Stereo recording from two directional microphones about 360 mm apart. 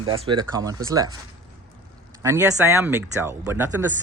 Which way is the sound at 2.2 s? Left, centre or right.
Centre.